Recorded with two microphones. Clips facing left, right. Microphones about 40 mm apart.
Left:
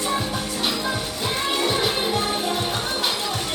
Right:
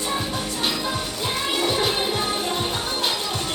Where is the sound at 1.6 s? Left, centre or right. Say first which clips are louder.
Right 1 dB; centre.